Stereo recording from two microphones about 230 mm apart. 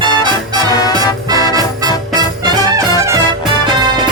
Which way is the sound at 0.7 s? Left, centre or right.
Centre.